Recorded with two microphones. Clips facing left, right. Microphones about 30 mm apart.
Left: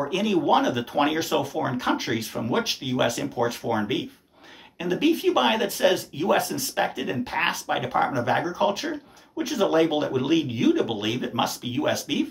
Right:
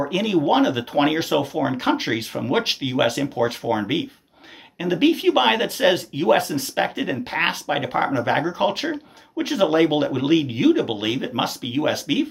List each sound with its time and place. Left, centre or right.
0.0 s speech: centre
2.5 s speech: right; by 4.1 s centre
4.9 s speech: right
6.8 s speech: right